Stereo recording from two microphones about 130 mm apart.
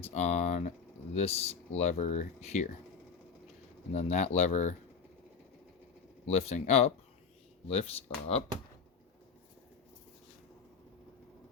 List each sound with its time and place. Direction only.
0.0 s speech: 60° left (ahead or behind)
1.1 s speech: 55° left (ahead or behind)
3.9 s speech: 60° left (ahead or behind)
6.2 s speech: 55° left (ahead or behind)